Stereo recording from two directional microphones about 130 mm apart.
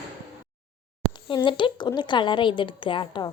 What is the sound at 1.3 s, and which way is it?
A woman's voice, 40° left (ahead or behind).